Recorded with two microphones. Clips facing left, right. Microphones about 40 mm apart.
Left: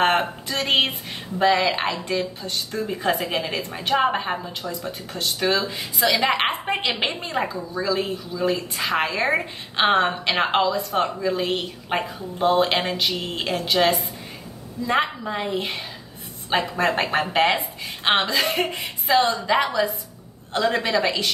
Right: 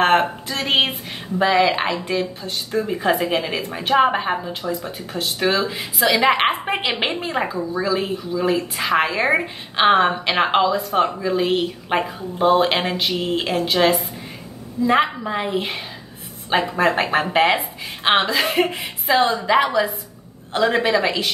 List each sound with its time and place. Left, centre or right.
0.0 s a woman's voice: centre